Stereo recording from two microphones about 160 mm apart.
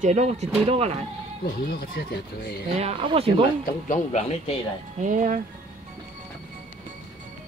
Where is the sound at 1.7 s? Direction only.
75° left (ahead or behind).